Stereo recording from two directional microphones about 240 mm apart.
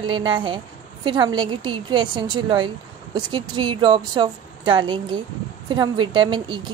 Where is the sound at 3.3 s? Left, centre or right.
Centre.